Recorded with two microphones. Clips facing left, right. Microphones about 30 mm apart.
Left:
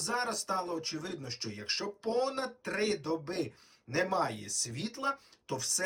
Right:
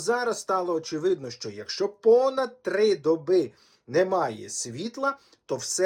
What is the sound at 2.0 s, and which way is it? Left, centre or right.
Speech, right.